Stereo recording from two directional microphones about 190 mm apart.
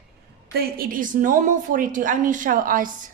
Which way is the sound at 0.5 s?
50° right (ahead or behind).